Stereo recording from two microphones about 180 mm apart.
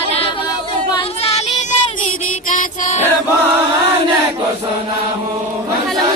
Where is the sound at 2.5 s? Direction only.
50° left (ahead or behind).